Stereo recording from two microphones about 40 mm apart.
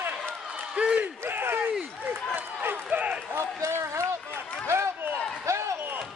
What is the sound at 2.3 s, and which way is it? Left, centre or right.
Run, right.